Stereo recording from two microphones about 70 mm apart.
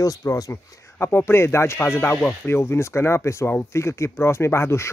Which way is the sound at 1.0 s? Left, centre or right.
Left.